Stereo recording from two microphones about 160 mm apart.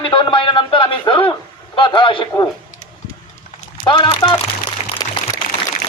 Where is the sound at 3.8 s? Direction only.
30° left (ahead or behind).